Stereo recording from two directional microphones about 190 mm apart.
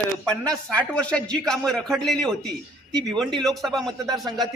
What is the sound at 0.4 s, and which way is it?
A man's voice, 5° left (ahead or behind).